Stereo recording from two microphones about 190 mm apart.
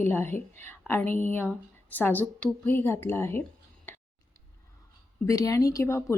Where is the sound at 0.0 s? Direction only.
10° left (ahead or behind).